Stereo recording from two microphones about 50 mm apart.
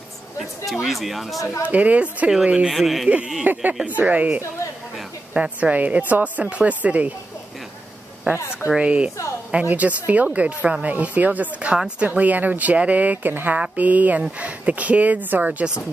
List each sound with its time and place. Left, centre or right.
0.4 s speech: centre
1.7 s speech: right
2.7 s speech: centre
3.5 s speech: right
3.8 s speech: right
8.3 s speech: right
8.6 s speech: right